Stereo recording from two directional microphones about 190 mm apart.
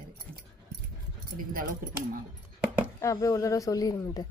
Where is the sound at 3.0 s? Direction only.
15° left (ahead or behind).